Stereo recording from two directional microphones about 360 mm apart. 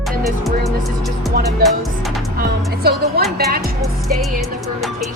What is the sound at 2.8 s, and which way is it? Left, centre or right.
Music, right.